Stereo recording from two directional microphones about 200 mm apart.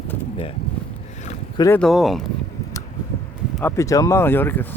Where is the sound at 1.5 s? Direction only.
15° left (ahead or behind).